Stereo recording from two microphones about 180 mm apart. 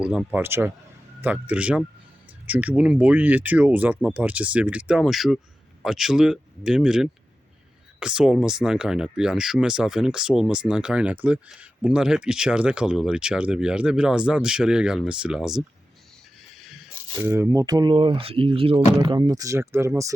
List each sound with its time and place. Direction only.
0.0 s speech: 5° right (ahead or behind)
16.6 s a sound: centre (ahead or behind)
17.2 s speech: 15° right (ahead or behind)